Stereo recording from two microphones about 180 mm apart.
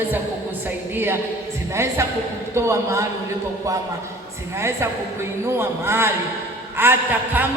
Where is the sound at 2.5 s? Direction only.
15° right (ahead or behind).